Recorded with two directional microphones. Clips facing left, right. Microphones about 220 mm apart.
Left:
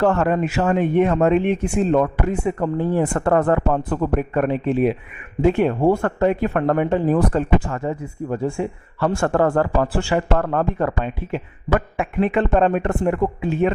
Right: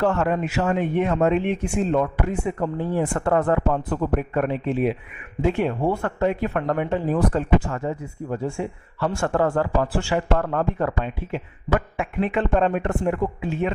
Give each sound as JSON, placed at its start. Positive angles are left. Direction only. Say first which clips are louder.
{"t": 0.0, "sound": "speech", "louder": "left 3 dB", "side_deg": 55}